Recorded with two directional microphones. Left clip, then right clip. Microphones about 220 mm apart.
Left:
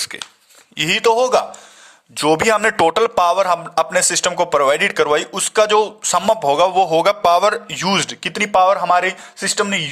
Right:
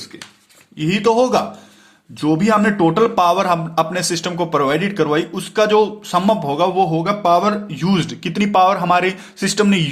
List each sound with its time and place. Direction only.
0.8 s a man's voice: 40° left (ahead or behind)
7.7 s speech: 30° left (ahead or behind)